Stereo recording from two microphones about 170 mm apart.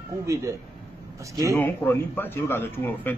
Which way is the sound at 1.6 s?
15° left (ahead or behind).